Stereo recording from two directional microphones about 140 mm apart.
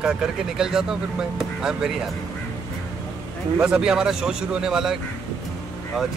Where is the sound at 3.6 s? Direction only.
5° right (ahead or behind).